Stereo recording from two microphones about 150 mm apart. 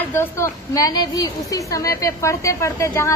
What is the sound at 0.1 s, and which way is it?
A woman's voice, 15° left (ahead or behind).